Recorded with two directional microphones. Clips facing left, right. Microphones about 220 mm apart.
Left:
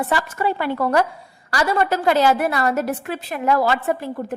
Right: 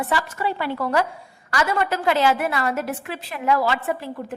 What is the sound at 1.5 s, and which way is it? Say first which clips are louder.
A woman's voice: left 3 dB; 35° left (ahead or behind).